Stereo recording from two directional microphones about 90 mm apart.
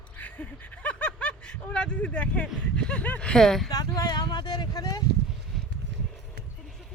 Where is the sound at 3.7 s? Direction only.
45° left (ahead or behind).